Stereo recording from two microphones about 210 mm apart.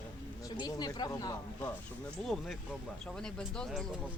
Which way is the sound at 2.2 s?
Centre (ahead or behind).